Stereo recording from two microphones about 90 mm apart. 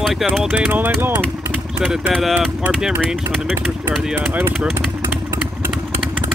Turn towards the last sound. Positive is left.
turn(degrees=-20)  # may be behind; listen again after turning